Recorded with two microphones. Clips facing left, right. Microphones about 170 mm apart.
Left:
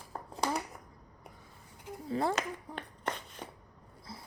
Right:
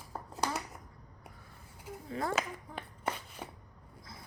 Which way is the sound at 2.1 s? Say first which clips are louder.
Left 5 dB; 30° left (ahead or behind).